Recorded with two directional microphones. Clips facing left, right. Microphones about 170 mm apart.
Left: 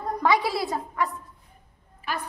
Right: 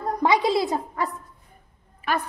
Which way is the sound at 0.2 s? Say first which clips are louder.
Right 3 dB; 20° right (ahead or behind).